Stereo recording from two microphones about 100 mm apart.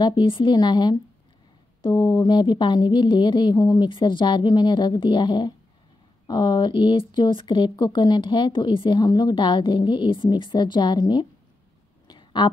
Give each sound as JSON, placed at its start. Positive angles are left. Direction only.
{"t": 0.0, "sound": "speech", "side_deg": 55}
{"t": 3.9, "sound": "speech", "side_deg": 55}
{"t": 12.1, "sound": "a sound", "side_deg": 50}